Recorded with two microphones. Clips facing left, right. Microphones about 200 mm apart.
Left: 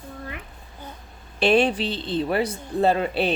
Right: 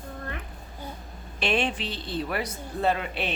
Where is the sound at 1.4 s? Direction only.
35° left (ahead or behind).